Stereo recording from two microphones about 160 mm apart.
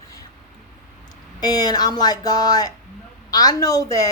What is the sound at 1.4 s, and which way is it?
A woman's voice, 25° left (ahead or behind).